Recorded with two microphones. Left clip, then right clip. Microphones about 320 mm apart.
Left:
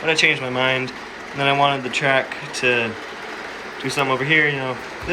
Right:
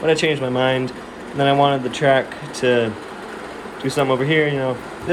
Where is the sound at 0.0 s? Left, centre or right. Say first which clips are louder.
Even; centre.